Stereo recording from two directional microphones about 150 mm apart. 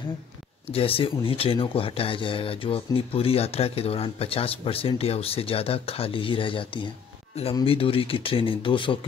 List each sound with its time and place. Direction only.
0.7 s speech: 40° left (ahead or behind)